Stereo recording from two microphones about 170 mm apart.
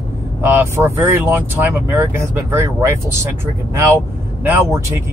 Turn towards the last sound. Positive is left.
turn(degrees=-15)  # may be behind; listen again after turning